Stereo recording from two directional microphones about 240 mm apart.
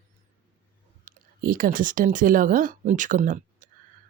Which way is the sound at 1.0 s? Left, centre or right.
Right.